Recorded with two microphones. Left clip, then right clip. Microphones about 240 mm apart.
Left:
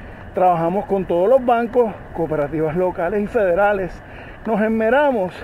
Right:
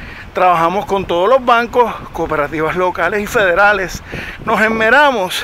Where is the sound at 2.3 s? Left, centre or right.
Centre.